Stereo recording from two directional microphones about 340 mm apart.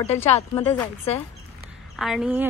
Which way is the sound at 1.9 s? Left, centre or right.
Centre.